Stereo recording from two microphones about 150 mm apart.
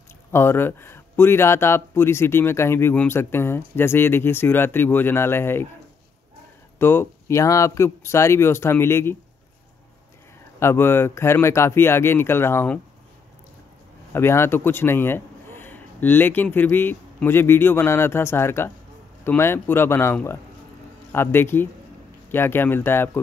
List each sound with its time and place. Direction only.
0.3 s speech: 15° left (ahead or behind)
6.8 s speech: 15° left (ahead or behind)
10.6 s speech: 15° left (ahead or behind)
14.1 s a man's voice: 15° left (ahead or behind)